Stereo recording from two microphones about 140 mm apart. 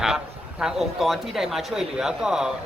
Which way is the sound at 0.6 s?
Centre (ahead or behind).